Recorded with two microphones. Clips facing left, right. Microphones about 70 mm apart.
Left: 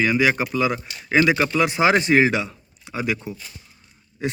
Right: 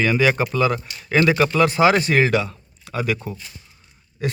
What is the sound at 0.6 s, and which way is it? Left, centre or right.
Speech, centre.